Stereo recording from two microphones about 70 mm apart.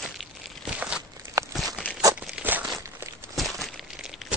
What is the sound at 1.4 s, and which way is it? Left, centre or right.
Walk, right.